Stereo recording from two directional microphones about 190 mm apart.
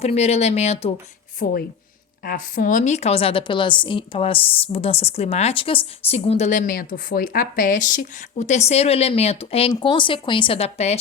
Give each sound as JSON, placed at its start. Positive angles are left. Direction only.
{"t": 0.0, "sound": "a woman's voice", "side_deg": 35}
{"t": 1.4, "sound": "a woman's voice", "side_deg": 45}